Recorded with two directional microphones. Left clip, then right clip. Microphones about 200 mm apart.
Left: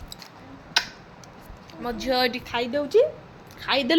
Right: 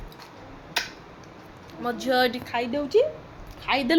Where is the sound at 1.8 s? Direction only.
10° right (ahead or behind).